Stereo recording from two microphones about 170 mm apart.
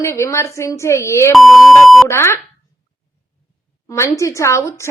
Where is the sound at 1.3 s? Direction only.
Centre (ahead or behind).